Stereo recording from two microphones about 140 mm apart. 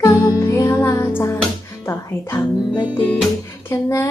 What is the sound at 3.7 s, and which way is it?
Speech, 20° left (ahead or behind).